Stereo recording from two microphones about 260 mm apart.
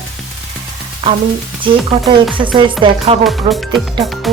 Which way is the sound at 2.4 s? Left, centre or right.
Centre.